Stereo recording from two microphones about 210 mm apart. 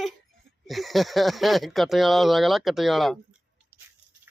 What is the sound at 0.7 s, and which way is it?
Speech, centre (ahead or behind).